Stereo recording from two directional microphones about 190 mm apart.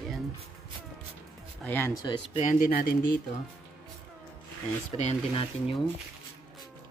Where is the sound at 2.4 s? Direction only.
45° left (ahead or behind).